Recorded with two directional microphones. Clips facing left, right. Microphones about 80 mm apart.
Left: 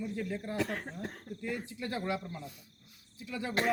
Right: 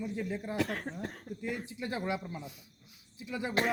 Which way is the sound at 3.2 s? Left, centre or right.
Right.